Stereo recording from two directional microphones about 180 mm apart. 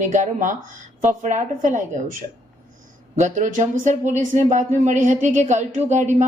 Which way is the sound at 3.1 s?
45° right (ahead or behind).